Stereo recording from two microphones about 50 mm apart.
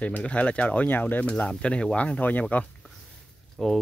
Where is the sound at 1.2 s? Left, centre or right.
Left.